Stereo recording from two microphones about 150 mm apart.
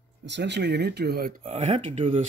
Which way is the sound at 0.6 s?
90° right.